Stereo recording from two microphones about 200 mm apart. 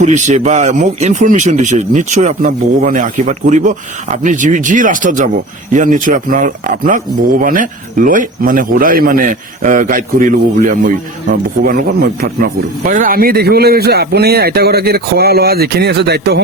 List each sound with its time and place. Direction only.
0.0 s a man's voice: 35° right (ahead or behind); by 16.4 s 55° right (ahead or behind)